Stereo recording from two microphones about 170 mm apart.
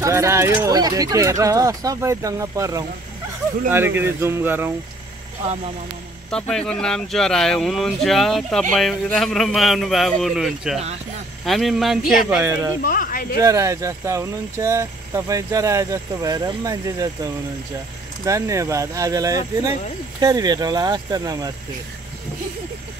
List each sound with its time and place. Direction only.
0.0 s speech: 15° right (ahead or behind)
6.3 s speech: 5° left (ahead or behind)
12.3 s speech: 15° right (ahead or behind)
12.8 s speech: 55° left (ahead or behind)
13.4 s speech: 20° right (ahead or behind)